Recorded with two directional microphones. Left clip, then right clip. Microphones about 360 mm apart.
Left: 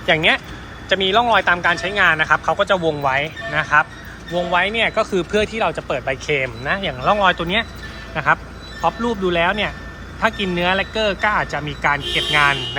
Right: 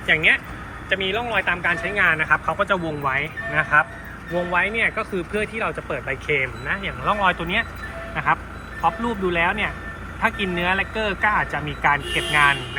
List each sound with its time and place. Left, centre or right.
0.1 s speech: left
0.9 s speech: centre